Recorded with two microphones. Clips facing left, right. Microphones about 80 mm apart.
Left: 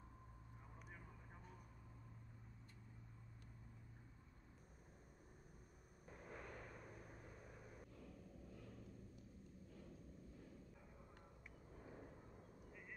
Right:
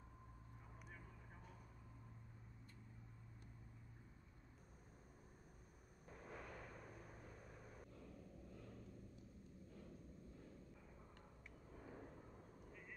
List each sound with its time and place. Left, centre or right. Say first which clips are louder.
6.3 s vehicle: even; left